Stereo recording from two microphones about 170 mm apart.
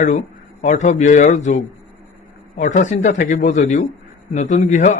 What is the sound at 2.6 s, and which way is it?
A man's voice, 45° left (ahead or behind).